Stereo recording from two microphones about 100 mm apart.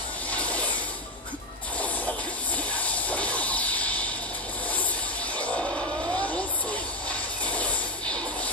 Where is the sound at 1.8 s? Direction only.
15° left (ahead or behind).